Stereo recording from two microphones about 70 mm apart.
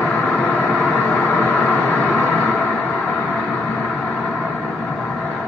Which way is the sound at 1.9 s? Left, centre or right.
Centre.